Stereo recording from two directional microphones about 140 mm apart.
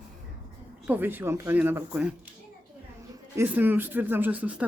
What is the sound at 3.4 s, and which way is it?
Speech, 15° right (ahead or behind).